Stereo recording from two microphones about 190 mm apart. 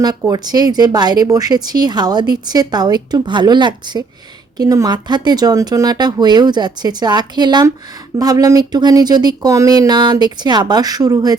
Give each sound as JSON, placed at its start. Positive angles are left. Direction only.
{"t": 0.0, "sound": "a woman's voice", "side_deg": -20}